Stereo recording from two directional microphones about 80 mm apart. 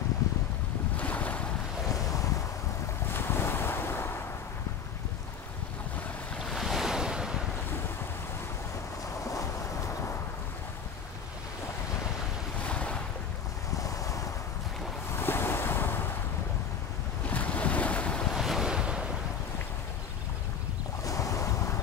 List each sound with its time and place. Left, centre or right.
0.9 s boat: left
3.1 s waves: left
6.4 s waves: centre
12.6 s ocean: centre
13.7 s waves: left
15.1 s waves: left
17.3 s waves: centre
18.3 s waves: centre
21.0 s boat: left